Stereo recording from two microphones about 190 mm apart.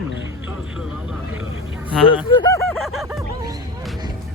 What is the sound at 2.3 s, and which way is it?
Speech, 25° left (ahead or behind).